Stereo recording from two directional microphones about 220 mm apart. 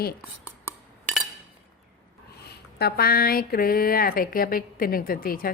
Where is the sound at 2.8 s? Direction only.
45° left (ahead or behind).